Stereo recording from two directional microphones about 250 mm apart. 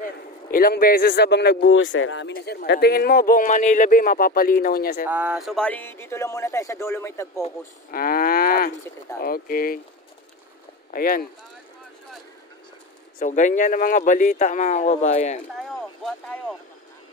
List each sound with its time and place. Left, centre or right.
0.5 s speech: left
5.0 s speech: centre
7.9 s speech: left
10.9 s speech: left
13.2 s speech: left